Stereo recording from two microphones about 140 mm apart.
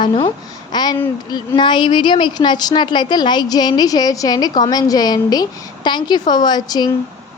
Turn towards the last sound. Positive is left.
turn(degrees=30)  # may be behind; listen again after turning